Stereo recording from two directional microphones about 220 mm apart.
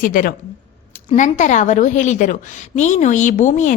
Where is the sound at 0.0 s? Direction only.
40° left (ahead or behind).